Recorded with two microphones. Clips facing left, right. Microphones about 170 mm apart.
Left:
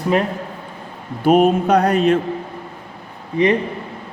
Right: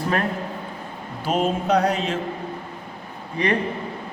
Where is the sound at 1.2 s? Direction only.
60° left (ahead or behind).